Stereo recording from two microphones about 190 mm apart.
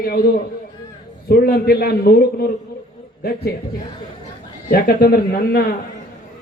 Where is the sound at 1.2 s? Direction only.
55° left (ahead or behind).